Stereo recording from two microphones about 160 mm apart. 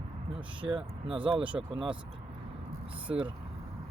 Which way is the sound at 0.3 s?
30° right (ahead or behind).